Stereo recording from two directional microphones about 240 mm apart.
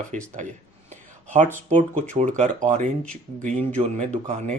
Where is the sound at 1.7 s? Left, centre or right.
Right.